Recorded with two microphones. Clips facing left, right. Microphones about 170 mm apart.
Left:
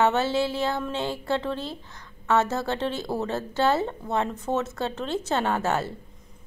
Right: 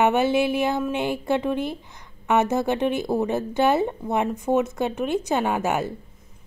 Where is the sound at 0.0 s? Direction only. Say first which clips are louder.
Right 3 dB; 15° right (ahead or behind).